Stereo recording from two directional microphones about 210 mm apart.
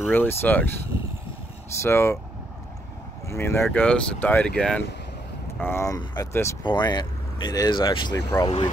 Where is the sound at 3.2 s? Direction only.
10° left (ahead or behind).